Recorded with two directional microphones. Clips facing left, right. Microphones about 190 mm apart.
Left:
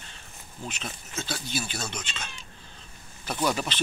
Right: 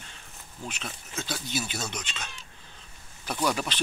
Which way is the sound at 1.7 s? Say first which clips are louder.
Even; 20° right (ahead or behind).